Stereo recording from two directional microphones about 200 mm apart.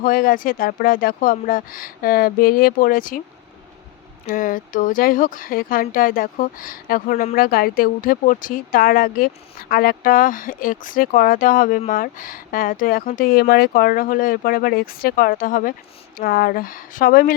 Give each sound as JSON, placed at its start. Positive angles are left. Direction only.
{"t": 0.0, "sound": "speech", "side_deg": 45}
{"t": 4.3, "sound": "speech", "side_deg": 45}